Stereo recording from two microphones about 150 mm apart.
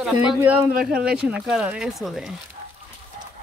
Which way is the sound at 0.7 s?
75° right (ahead or behind).